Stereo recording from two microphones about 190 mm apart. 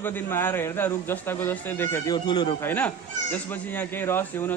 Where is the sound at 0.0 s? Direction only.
10° left (ahead or behind).